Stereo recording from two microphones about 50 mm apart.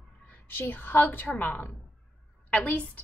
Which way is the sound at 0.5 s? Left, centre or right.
Left.